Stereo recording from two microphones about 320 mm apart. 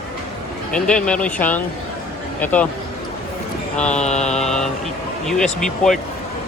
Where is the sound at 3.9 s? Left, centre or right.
Left.